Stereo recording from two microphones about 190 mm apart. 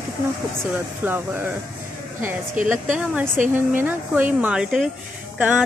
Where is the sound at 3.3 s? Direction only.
45° right (ahead or behind).